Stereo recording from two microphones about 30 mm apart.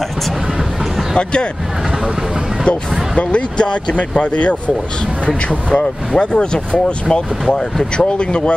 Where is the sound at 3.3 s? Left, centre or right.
Left.